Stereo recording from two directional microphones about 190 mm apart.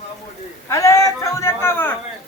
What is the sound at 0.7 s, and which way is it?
A man's voice, 15° left (ahead or behind).